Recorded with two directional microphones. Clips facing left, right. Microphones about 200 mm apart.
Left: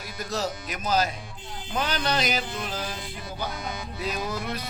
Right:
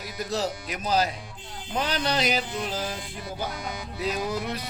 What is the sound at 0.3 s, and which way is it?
Speech, 30° right (ahead or behind).